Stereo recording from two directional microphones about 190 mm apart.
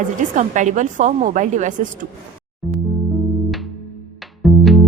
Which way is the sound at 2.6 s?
Centre (ahead or behind).